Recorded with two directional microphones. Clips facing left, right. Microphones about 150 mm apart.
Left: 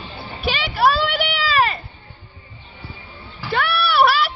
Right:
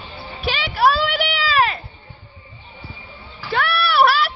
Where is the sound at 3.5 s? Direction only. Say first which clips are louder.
Even; centre (ahead or behind).